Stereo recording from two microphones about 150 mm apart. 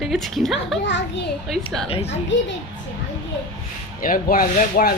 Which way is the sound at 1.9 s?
45° left (ahead or behind).